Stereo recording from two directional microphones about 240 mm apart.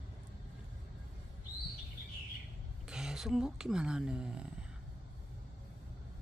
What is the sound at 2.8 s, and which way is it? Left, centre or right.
Speech, centre.